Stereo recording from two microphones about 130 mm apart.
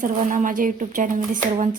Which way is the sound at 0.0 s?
80° right.